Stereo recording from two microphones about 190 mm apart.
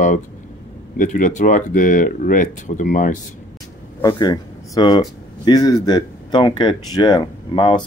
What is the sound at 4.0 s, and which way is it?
Speech, 20° left (ahead or behind).